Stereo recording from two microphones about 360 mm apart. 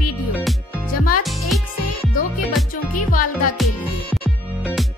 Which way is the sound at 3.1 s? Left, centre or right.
Left.